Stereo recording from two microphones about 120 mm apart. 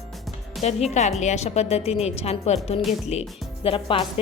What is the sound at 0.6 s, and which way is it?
A woman's voice, 70° left (ahead or behind).